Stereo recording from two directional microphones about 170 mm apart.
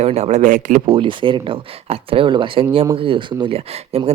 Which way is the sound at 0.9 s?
30° right (ahead or behind).